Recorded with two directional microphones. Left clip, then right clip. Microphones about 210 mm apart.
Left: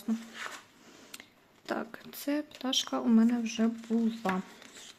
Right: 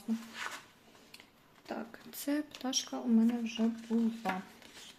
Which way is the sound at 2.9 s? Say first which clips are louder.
Left 3 dB; 40° left (ahead or behind).